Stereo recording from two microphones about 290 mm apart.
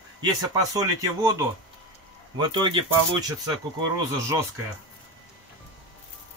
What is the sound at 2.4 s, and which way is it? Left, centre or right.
Speech, centre.